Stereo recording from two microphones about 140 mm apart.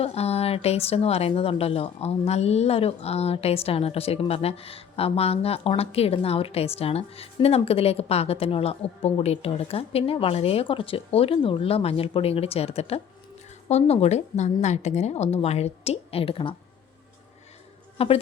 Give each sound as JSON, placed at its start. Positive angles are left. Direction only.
{"t": 0.0, "sound": "speech", "side_deg": 45}
{"t": 17.9, "sound": "a woman's voice", "side_deg": 45}